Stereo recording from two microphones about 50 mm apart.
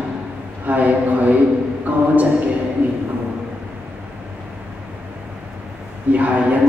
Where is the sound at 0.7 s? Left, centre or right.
Right.